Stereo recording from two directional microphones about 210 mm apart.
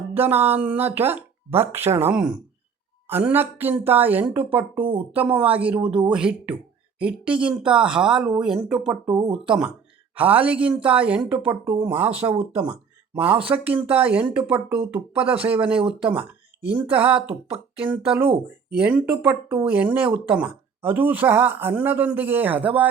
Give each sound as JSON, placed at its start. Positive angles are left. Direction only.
{"t": 0.1, "sound": "speech", "side_deg": -10}
{"t": 9.1, "sound": "speech", "side_deg": -20}
{"t": 9.4, "sound": "speech", "side_deg": -5}